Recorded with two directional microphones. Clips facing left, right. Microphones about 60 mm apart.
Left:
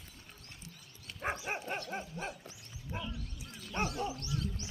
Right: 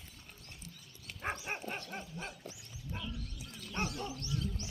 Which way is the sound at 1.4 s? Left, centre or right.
Centre.